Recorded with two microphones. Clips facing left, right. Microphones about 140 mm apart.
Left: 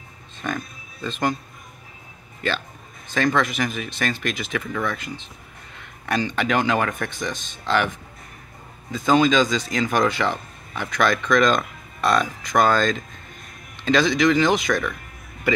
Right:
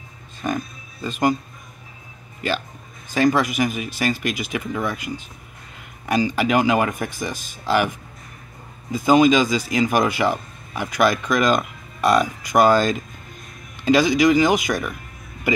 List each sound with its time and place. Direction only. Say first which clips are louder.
0.4 s speech: right 4 dB; 15° right (ahead or behind)
3.1 s speech: right 3 dB; 10° right (ahead or behind)
8.9 s speech: right 3 dB; 10° right (ahead or behind)